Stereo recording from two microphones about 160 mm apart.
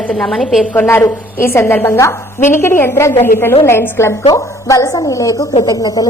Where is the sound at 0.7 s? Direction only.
15° left (ahead or behind).